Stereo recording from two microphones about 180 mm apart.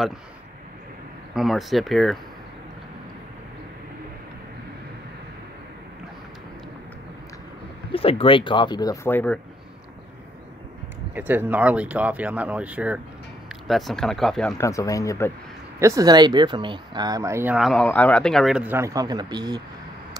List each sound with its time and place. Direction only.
1.3 s speech: centre (ahead or behind)
7.9 s speech: 30° left (ahead or behind); by 9.4 s 10° left (ahead or behind)
11.1 s speech: 10° right (ahead or behind)
14.6 s speech: 15° left (ahead or behind)
15.8 s speech: 20° right (ahead or behind)
17.6 s speech: centre (ahead or behind); by 19.6 s 25° right (ahead or behind)